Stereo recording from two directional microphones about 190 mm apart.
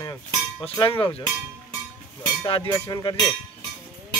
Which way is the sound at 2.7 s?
20° left (ahead or behind).